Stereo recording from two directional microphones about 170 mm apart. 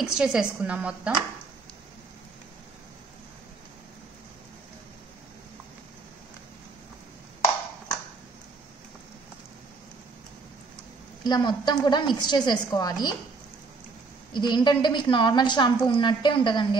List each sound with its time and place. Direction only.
0.0 s a woman's voice: 5° right (ahead or behind)
11.2 s a woman's voice: 25° left (ahead or behind)
14.3 s a woman's voice: 25° left (ahead or behind)